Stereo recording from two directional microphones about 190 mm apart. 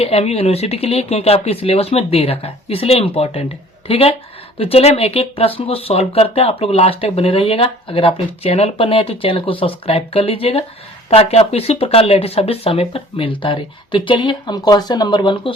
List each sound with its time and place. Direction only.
0.0 s speech: 35° left (ahead or behind)